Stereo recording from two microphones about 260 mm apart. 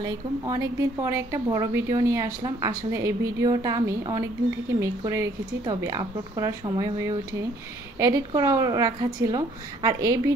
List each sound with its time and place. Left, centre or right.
0.0 s a woman's voice: centre